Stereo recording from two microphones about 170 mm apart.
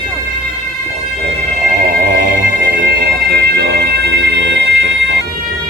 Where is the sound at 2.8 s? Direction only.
70° right (ahead or behind); by 5.2 s 90° right.